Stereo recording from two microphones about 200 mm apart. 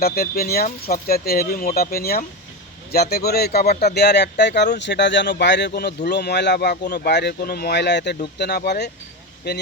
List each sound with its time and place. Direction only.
0.0 s speech: 50° left (ahead or behind)